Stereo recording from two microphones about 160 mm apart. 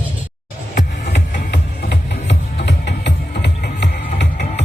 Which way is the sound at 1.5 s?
85° left.